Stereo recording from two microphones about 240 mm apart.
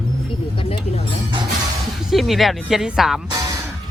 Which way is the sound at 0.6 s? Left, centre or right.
Left.